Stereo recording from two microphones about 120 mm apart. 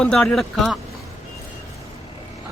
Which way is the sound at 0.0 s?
5° left (ahead or behind).